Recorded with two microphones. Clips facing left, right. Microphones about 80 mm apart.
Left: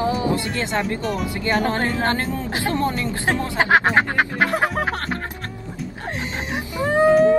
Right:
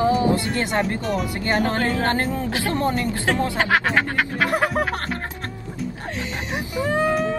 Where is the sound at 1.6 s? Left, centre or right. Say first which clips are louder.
Even; left.